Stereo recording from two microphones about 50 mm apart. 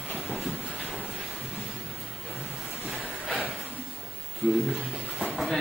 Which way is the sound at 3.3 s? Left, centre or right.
Right.